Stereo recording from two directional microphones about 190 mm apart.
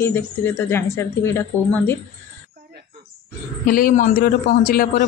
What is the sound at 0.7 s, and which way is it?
Speech, 15° left (ahead or behind).